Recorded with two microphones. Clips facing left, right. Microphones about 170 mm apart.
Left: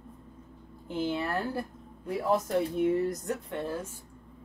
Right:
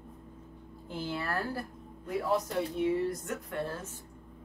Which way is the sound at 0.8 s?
20° left (ahead or behind).